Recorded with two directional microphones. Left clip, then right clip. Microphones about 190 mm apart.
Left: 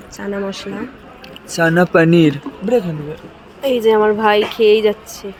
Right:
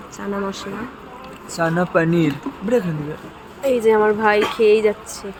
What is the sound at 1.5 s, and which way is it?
Speech, 55° left (ahead or behind).